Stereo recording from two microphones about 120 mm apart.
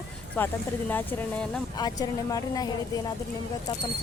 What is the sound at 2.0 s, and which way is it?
A woman's voice, 30° left (ahead or behind).